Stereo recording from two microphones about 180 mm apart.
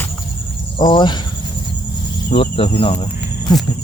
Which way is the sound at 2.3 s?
30° left (ahead or behind).